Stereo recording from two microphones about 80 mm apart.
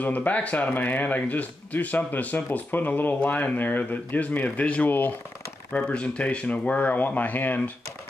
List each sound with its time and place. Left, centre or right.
0.0 s speech: centre
5.7 s speech: centre